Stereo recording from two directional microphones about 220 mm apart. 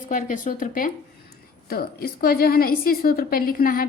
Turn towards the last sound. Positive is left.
turn(degrees=40)  # may be behind; listen again after turning